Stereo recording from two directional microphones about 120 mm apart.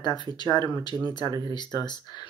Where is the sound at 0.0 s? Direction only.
35° left (ahead or behind).